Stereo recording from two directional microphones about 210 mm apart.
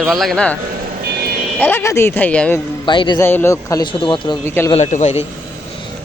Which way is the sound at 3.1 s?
10° left (ahead or behind).